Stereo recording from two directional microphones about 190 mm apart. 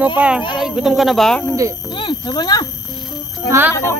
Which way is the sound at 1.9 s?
25° left (ahead or behind).